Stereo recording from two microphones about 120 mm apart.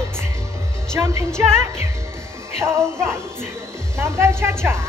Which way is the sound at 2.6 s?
20° right (ahead or behind).